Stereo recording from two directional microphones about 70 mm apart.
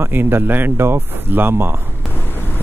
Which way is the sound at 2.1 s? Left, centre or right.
Left.